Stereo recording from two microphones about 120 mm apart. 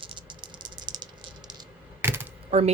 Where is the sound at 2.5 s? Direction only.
60° right (ahead or behind).